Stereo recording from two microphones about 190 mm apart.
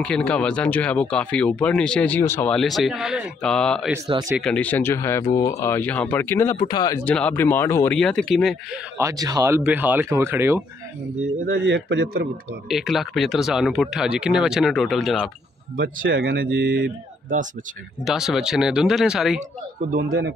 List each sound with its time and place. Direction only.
0.0 s speech: 5° left (ahead or behind); by 7.0 s 20° left (ahead or behind)
7.1 s speech: 5° left (ahead or behind)
8.9 s speech: 15° right (ahead or behind)
9.6 s speech: 5° right (ahead or behind)
11.4 s a man's voice: 65° right (ahead or behind)
12.6 s speech: centre (ahead or behind)
16.1 s speech: 75° right (ahead or behind)
18.0 s speech: 5° right (ahead or behind)
19.8 s a man's voice: 50° right (ahead or behind)